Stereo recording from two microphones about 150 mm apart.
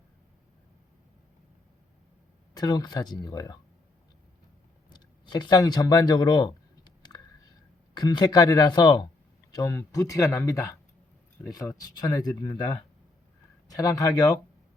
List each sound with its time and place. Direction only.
2.6 s speech: 25° left (ahead or behind)
4.9 s speech: 30° left (ahead or behind)
7.1 s a sound: 20° left (ahead or behind)
7.9 s speech: 30° left (ahead or behind)